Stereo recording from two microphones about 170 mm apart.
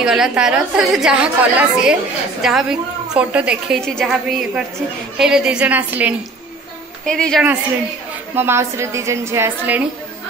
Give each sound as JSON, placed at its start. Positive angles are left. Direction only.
{"t": 0.0, "sound": "a woman's voice", "side_deg": -5}
{"t": 7.1, "sound": "a woman's voice", "side_deg": 5}
{"t": 8.4, "sound": "a woman's voice", "side_deg": -15}